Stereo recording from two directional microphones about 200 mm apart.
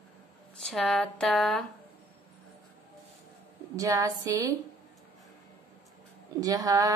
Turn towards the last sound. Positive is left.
turn(degrees=-15)  # may be behind; listen again after turning